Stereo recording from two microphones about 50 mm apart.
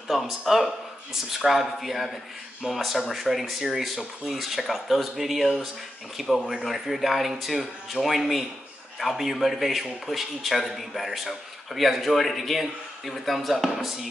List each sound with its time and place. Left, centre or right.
0.1 s a man's voice: centre